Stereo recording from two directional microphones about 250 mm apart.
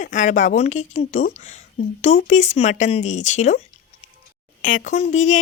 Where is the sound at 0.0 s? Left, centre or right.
Left.